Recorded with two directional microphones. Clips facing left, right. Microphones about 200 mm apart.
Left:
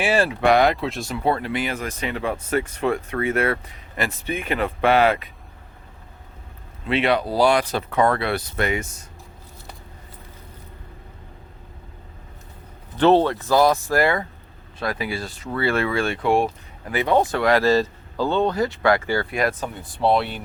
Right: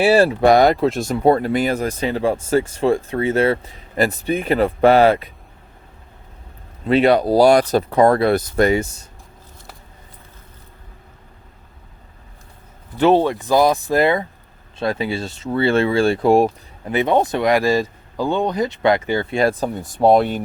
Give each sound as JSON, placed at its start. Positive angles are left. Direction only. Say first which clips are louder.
{"t": 0.0, "sound": "speech", "louder": "right 6 dB", "side_deg": -35}
{"t": 6.8, "sound": "speech", "louder": "right 7 dB", "side_deg": -40}
{"t": 13.0, "sound": "speech", "louder": "right 2 dB", "side_deg": -10}
{"t": 16.9, "sound": "speech", "louder": "right 3 dB", "side_deg": -20}